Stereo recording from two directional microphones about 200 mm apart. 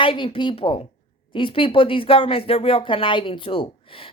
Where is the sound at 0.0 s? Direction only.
25° left (ahead or behind).